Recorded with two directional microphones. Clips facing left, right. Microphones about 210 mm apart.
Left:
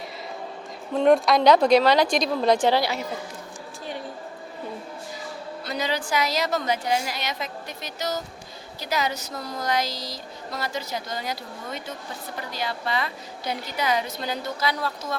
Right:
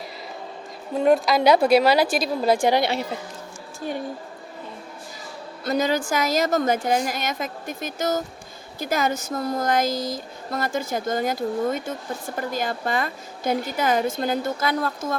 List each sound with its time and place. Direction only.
0.9 s a woman's voice: centre (ahead or behind)
5.6 s speech: 45° right (ahead or behind)